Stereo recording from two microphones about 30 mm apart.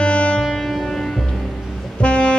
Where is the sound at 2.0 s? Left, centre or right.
Left.